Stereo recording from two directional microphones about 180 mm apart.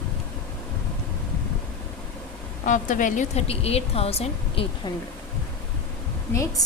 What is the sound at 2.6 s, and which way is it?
Speech, 45° left (ahead or behind).